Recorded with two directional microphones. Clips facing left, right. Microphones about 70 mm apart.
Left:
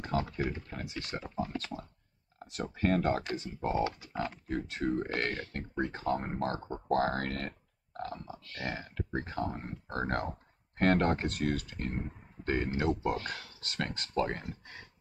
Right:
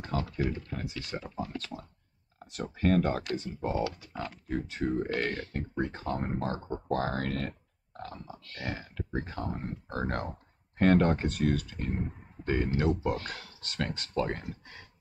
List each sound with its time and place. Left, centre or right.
0.4 s speech: centre
4.1 s speech: left
4.5 s speech: centre
8.0 s pig: centre
9.1 s speech: centre